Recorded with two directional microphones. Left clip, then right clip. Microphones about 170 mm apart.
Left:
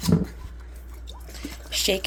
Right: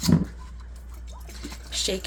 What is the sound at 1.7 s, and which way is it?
Boiling, 25° left (ahead or behind).